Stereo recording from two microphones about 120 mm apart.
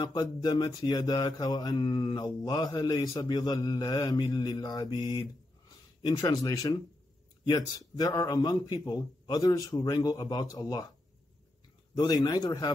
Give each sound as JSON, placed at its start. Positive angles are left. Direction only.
{"t": 0.0, "sound": "mantra", "side_deg": 35}
{"t": 11.9, "sound": "mantra", "side_deg": 35}